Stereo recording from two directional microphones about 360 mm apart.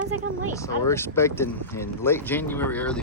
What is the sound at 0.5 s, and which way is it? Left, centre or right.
Speech, centre.